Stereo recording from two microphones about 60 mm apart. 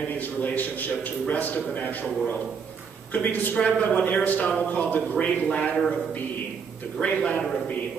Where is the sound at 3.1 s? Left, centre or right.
Left.